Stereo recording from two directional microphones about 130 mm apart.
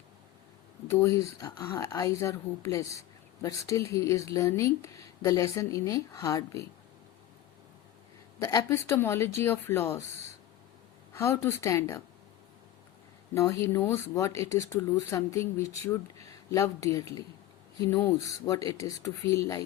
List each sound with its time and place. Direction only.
0.9 s speech: 25° left (ahead or behind)
8.4 s speech: 25° left (ahead or behind)
11.1 s speech: 20° left (ahead or behind)
13.3 s speech: 20° left (ahead or behind)